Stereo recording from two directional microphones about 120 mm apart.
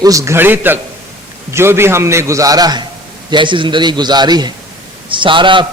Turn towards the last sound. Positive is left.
turn(degrees=-45)  # may be behind; listen again after turning